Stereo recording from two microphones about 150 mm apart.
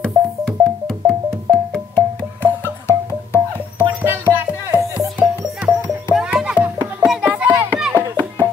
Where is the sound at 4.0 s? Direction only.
10° right (ahead or behind).